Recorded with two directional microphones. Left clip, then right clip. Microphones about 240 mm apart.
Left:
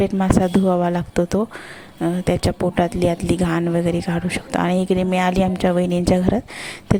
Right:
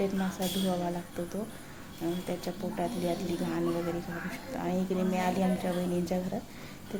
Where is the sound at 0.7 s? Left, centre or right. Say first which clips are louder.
Left 14 dB; left.